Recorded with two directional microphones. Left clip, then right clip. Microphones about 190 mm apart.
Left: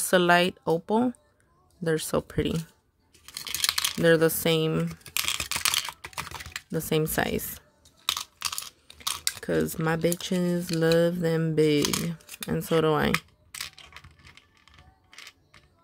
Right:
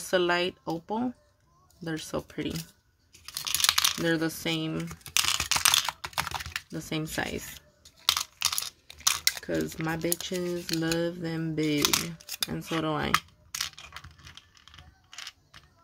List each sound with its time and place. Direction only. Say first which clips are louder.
0.0 s speech: left 5 dB; 55° left (ahead or behind)
3.6 s a sound: right 2 dB; 10° right (ahead or behind)
4.0 s speech: left 7 dB; 55° left (ahead or behind)
4.8 s typing: right 2 dB; 10° right (ahead or behind)
6.7 s speech: left 11 dB; 50° left (ahead or behind)
8.0 s computer keyboard: right 3 dB; 10° right (ahead or behind)
9.1 s a sound: right 2 dB; 10° right (ahead or behind)
9.4 s speech: left 4 dB; 50° left (ahead or behind)
12.2 s a sound: right 7 dB; 15° right (ahead or behind)
12.4 s speech: left 7 dB; 55° left (ahead or behind)
13.1 s tearing: right 2 dB; 5° right (ahead or behind)